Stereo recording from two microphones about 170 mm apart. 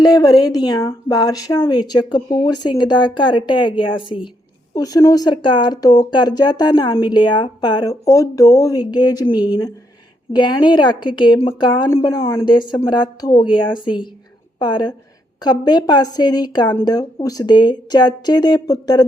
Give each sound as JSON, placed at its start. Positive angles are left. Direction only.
{"t": 0.0, "sound": "speech", "side_deg": 20}
{"t": 10.3, "sound": "speech", "side_deg": 25}
{"t": 12.2, "sound": "speech", "side_deg": 15}
{"t": 12.5, "sound": "speech", "side_deg": 25}